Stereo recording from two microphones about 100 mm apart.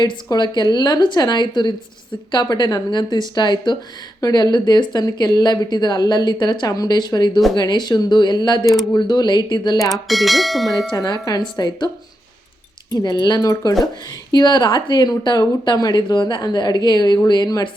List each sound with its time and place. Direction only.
0.0 s speech: 45° left (ahead or behind)
9.9 s speech: centre (ahead or behind)
10.9 s speech: 40° left (ahead or behind)
12.9 s speech: 40° left (ahead or behind)